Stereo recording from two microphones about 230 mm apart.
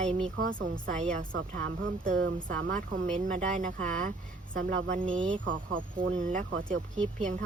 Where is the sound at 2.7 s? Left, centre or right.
Right.